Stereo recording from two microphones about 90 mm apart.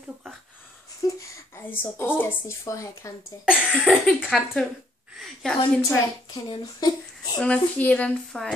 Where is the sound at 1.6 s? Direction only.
20° left (ahead or behind).